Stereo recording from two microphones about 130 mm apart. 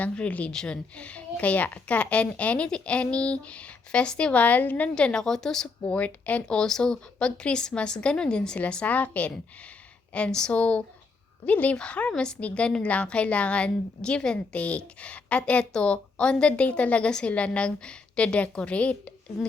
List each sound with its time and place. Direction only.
0.0 s a woman's voice: 10° left (ahead or behind)